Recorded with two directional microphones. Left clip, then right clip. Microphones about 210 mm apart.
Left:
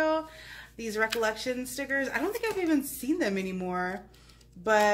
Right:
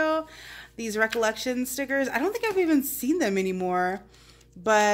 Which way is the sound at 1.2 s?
50° right (ahead or behind).